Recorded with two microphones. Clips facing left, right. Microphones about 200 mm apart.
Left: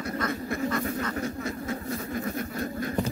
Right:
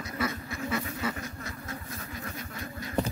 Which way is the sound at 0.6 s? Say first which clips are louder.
Left 2 dB; 10° right (ahead or behind).